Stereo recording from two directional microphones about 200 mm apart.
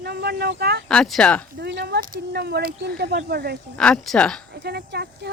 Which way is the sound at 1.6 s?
60° right (ahead or behind).